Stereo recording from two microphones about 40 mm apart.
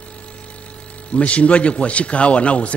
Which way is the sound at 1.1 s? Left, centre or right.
Left.